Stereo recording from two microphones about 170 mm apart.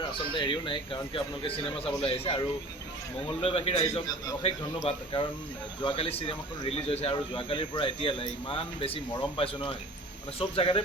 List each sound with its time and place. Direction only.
0.1 s speech: 30° left (ahead or behind)